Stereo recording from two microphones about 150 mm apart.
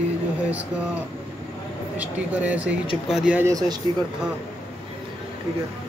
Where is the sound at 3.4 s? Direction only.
25° right (ahead or behind).